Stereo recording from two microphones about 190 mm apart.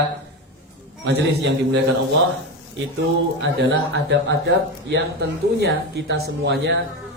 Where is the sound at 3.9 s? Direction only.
70° right (ahead or behind).